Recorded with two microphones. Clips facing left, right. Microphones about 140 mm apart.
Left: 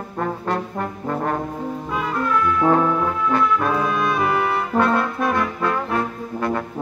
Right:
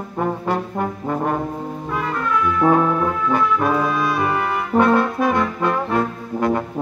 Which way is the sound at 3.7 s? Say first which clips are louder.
Right 1 dB; centre (ahead or behind).